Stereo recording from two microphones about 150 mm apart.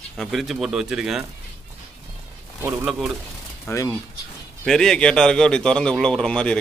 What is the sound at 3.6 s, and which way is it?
Speech, 15° left (ahead or behind).